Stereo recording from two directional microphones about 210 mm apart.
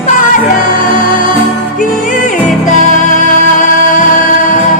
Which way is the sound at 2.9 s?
35° left (ahead or behind).